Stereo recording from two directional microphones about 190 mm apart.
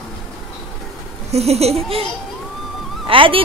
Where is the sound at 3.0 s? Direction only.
30° right (ahead or behind).